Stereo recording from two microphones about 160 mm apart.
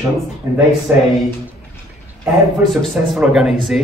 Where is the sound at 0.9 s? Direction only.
10° right (ahead or behind).